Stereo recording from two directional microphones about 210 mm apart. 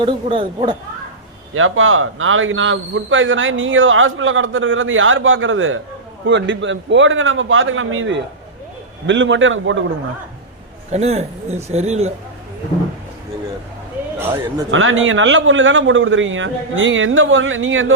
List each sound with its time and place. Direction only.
0.0 s speech: 25° right (ahead or behind)
1.5 s a man's voice: 70° right (ahead or behind)
10.9 s a man's voice: 30° right (ahead or behind)
14.7 s a man's voice: 70° right (ahead or behind)